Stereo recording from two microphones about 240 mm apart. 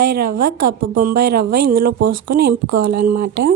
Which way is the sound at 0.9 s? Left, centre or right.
Right.